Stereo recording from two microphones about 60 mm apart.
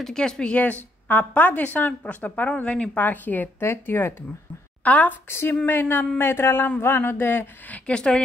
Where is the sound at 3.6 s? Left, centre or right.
Left.